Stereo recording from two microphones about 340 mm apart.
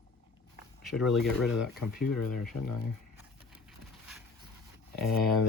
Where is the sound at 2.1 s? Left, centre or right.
Left.